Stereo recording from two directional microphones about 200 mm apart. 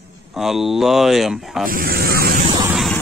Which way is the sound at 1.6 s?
45° right (ahead or behind).